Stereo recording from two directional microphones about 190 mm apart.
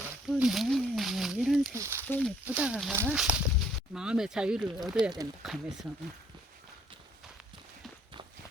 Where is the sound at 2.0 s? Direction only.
10° left (ahead or behind).